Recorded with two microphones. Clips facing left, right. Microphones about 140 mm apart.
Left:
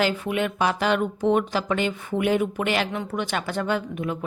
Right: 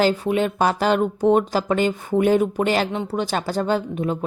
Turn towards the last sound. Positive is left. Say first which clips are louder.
# right 4 dB
turn(degrees=-30)  # may be behind; listen again after turning